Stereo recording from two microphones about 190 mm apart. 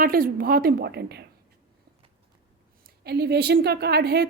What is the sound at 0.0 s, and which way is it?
A woman's voice, 50° right (ahead or behind).